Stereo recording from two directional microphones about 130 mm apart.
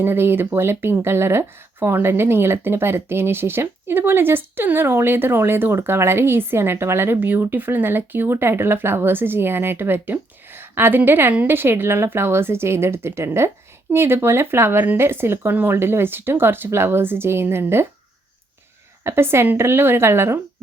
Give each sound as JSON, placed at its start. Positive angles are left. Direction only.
{"t": 0.0, "sound": "speech", "side_deg": -20}
{"t": 19.0, "sound": "a woman's voice", "side_deg": -20}